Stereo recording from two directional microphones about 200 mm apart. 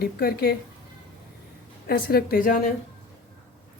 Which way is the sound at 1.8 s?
50° left (ahead or behind).